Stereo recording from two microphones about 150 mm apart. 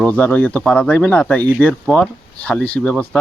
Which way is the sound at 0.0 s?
10° left (ahead or behind).